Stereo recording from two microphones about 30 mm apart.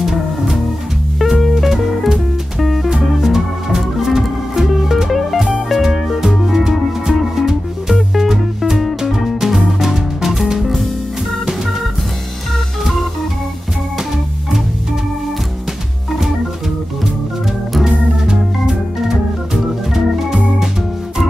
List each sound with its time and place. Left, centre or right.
0.0 s music: centre
2.6 s music: centre
3.1 s music: centre
6.0 s music: centre
6.4 s music: centre
17.8 s organ: right
19.0 s organ: centre